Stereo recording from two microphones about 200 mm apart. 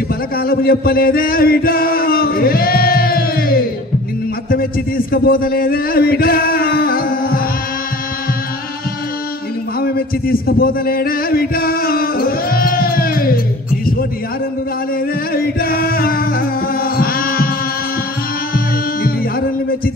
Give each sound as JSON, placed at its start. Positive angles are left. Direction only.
{"t": 0.4, "sound": "chant", "side_deg": 50}
{"t": 4.5, "sound": "a man's voice", "side_deg": 45}
{"t": 9.8, "sound": "a sound", "side_deg": 50}
{"t": 15.3, "sound": "music", "side_deg": 50}